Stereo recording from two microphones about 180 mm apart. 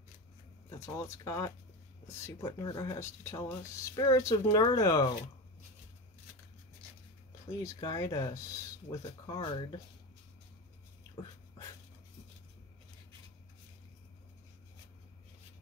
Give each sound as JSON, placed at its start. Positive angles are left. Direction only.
{"t": 0.7, "sound": "speech", "side_deg": 15}
{"t": 7.5, "sound": "speech", "side_deg": 20}